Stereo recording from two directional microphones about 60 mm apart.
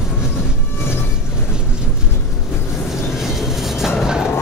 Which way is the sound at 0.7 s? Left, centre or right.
Left.